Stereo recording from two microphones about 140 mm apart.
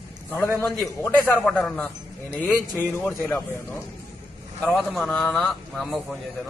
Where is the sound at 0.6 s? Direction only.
Centre (ahead or behind).